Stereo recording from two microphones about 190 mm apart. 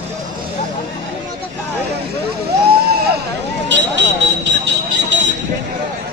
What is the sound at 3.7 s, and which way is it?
Vehicle, 70° right (ahead or behind).